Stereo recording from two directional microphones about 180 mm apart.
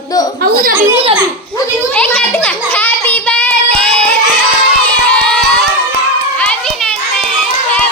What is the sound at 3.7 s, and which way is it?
Child singing, 5° left (ahead or behind).